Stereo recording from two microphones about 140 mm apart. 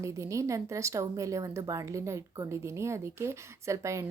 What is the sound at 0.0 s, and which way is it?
Speech, 20° right (ahead or behind).